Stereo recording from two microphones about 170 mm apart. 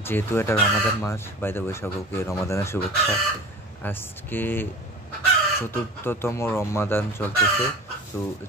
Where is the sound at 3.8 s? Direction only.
10° left (ahead or behind).